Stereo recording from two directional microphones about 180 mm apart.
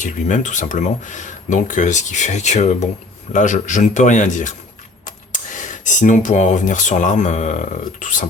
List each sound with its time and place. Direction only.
0.0 s speech: 45° left (ahead or behind)